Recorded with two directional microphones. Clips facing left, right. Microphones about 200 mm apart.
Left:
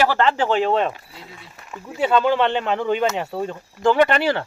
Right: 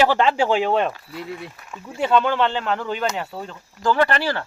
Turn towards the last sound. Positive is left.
turn(degrees=25)  # may be behind; listen again after turning